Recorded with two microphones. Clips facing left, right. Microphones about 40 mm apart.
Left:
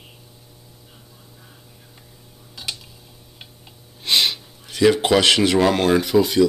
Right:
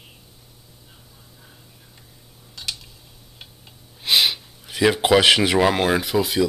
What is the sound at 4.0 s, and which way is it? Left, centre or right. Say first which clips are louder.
Speech: even; centre.